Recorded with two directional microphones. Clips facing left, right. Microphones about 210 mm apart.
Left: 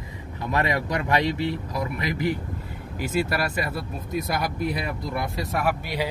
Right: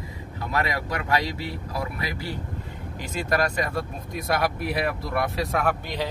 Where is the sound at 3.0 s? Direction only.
5° left (ahead or behind).